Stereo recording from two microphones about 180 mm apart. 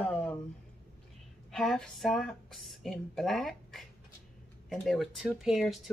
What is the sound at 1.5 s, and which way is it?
Speech, centre (ahead or behind).